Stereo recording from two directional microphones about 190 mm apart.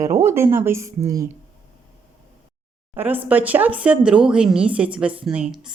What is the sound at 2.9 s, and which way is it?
A woman's voice, 10° right (ahead or behind).